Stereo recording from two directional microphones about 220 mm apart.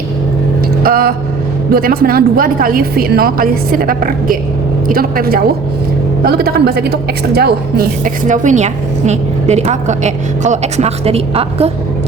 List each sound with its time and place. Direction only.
0.8 s a woman's voice: 40° right (ahead or behind)